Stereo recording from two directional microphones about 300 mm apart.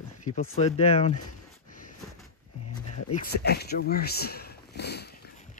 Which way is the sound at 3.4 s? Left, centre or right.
Left.